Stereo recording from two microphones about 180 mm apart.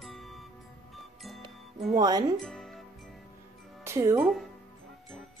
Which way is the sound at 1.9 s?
20° right (ahead or behind).